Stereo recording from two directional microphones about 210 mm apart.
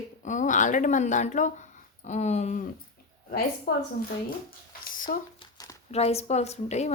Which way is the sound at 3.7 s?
45° left (ahead or behind).